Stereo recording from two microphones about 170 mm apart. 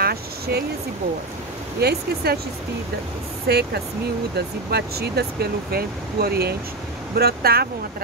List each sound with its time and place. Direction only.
0.0 s a sound: 65° right (ahead or behind)
1.8 s speech: 70° right (ahead or behind)
3.4 s speech: 70° right (ahead or behind)